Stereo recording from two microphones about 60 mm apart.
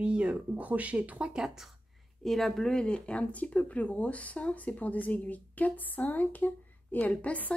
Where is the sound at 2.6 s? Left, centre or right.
Centre.